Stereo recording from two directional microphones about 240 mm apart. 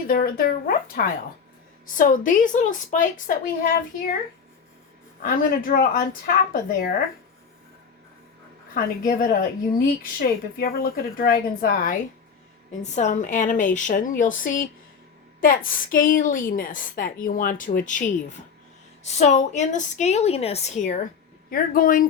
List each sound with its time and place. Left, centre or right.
0.1 s a woman's voice: left
5.2 s a woman's voice: left
8.7 s a woman's voice: left
19.0 s a woman's voice: left